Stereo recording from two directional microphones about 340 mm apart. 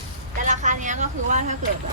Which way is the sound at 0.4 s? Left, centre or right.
Right.